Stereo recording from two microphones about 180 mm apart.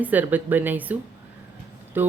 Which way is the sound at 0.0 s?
10° right (ahead or behind).